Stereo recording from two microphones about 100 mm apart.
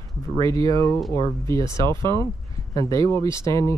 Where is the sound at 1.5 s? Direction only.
30° left (ahead or behind).